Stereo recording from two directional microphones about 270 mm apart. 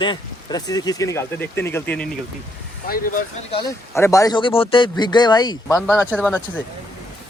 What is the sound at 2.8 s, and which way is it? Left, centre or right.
Speech, left.